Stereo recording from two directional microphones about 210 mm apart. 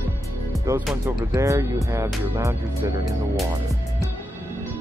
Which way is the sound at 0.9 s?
Centre (ahead or behind).